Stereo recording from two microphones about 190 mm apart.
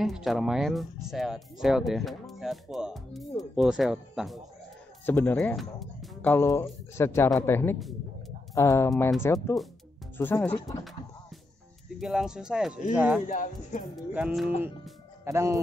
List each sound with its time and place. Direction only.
0.0 s speech: centre (ahead or behind)
5.0 s speech: 10° left (ahead or behind)
6.3 s speech: 15° left (ahead or behind)
12.0 s speech: centre (ahead or behind)
13.3 s speech: 45° left (ahead or behind)
14.1 s speech: 5° right (ahead or behind)